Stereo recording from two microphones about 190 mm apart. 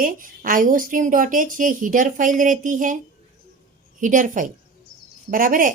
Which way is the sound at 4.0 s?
45° right (ahead or behind).